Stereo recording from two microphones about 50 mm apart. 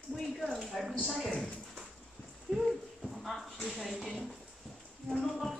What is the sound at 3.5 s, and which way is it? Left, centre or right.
Speech, centre.